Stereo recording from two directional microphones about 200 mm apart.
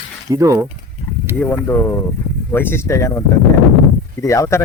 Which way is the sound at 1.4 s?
10° left (ahead or behind).